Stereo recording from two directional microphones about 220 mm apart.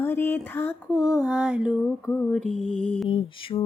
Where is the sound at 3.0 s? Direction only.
25° left (ahead or behind).